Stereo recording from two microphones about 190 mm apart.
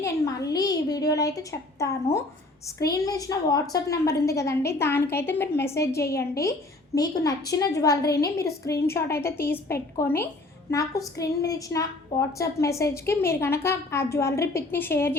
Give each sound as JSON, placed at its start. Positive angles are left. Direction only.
{"t": 0.0, "sound": "a woman's voice", "side_deg": 20}